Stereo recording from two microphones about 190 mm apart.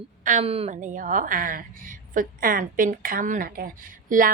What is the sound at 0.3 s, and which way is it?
A woman's voice, 35° right (ahead or behind).